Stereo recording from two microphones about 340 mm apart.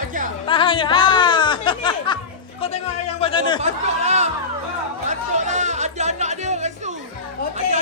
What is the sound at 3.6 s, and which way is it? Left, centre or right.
Speech, centre.